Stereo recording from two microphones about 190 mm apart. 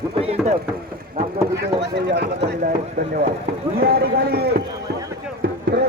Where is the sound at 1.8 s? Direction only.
65° right (ahead or behind).